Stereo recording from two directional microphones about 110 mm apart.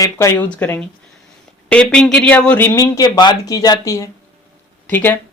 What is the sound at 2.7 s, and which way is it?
Speech, 30° left (ahead or behind).